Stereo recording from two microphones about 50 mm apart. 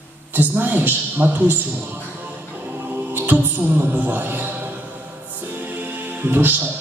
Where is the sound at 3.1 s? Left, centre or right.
Right.